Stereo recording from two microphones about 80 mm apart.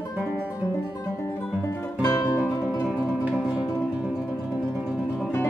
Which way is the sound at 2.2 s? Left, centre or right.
Left.